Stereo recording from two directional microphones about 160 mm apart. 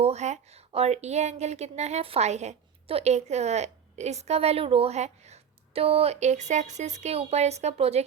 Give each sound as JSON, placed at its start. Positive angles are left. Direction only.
{"t": 0.0, "sound": "a woman's voice", "side_deg": -45}